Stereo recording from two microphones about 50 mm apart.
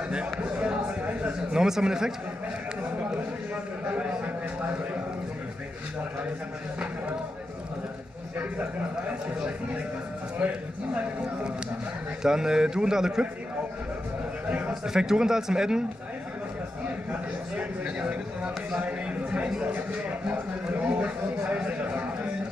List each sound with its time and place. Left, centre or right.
0.1 s a sound: right
1.5 s speech: centre
3.9 s a sound: right
10.4 s a man's voice: right
12.2 s speech: centre
14.7 s speech: centre
17.6 s a man's voice: right